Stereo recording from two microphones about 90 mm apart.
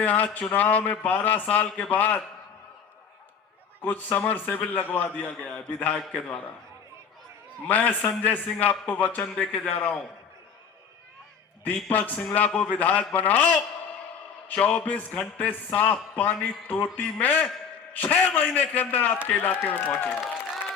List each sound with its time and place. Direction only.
0.0 s a man's voice: 15° left (ahead or behind)
3.8 s a man's voice: 20° left (ahead or behind)
7.7 s a man's voice: 20° left (ahead or behind)
11.6 s a man's voice: 15° left (ahead or behind)